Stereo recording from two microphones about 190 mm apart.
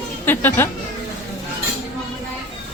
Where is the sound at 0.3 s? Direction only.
10° left (ahead or behind).